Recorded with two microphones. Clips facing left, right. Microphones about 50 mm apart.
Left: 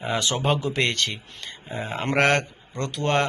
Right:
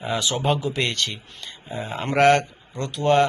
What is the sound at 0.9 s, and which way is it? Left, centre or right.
Speech, left.